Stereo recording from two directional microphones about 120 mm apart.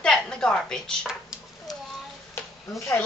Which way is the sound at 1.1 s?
5° right (ahead or behind).